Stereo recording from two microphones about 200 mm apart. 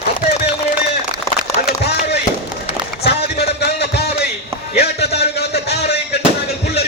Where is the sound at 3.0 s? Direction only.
55° left (ahead or behind).